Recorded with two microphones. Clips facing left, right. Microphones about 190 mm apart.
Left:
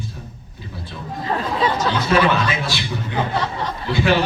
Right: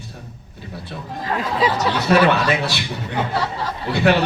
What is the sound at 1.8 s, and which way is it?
Speech, 65° right (ahead or behind).